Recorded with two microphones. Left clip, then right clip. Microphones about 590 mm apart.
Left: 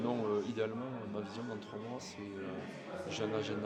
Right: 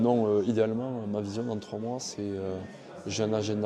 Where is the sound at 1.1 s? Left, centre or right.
Right.